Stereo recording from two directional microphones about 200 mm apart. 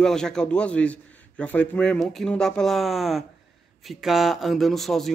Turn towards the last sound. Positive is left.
turn(degrees=0)  # may be behind; listen again after turning